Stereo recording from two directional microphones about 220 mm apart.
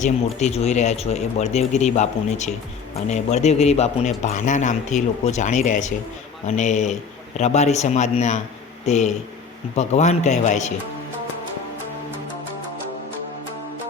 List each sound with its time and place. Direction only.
0.0 s a man's voice: 30° left (ahead or behind)